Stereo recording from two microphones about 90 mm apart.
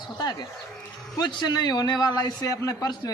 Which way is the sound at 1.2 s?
50° left (ahead or behind).